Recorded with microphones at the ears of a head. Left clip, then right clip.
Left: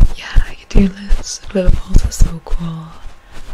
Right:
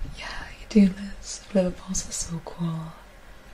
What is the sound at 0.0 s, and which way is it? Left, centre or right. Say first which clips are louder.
Whispering: left 9 dB; left.